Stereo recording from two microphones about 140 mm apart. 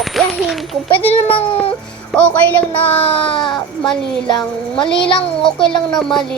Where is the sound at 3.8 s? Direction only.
5° left (ahead or behind).